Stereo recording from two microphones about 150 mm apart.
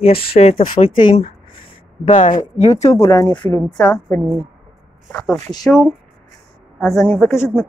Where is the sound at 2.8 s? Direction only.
20° left (ahead or behind).